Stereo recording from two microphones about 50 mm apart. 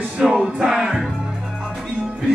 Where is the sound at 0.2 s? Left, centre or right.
Centre.